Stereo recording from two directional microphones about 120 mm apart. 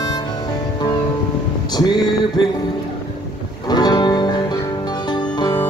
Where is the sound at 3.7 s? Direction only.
35° left (ahead or behind).